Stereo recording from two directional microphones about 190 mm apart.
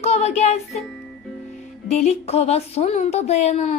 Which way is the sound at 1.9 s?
35° left (ahead or behind).